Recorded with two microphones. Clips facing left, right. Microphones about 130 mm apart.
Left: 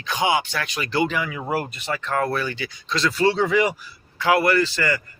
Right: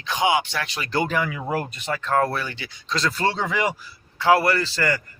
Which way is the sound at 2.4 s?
25° right (ahead or behind).